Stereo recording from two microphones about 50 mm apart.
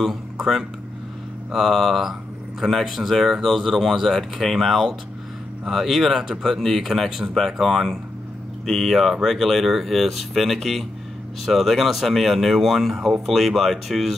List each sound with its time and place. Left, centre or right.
0.0 s speech: centre